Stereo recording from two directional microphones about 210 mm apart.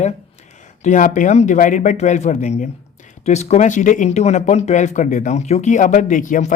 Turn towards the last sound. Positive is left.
turn(degrees=40)  # may be behind; listen again after turning